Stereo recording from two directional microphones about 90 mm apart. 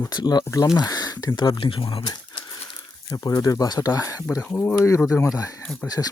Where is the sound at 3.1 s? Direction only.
45° left (ahead or behind).